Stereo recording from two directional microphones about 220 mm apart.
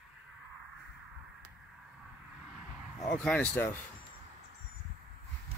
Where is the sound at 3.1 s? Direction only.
5° left (ahead or behind).